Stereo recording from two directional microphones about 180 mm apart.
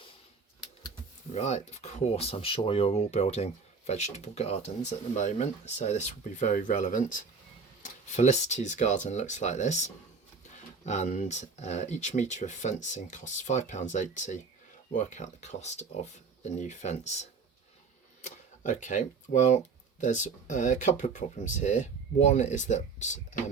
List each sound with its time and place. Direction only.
1.3 s speech: 35° left (ahead or behind)